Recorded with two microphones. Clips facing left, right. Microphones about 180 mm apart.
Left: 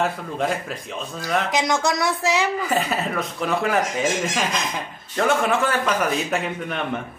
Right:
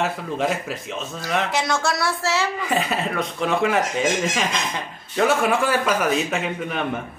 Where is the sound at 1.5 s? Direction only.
15° left (ahead or behind).